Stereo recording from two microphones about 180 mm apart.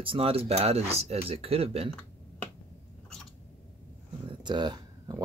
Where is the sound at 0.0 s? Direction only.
30° right (ahead or behind).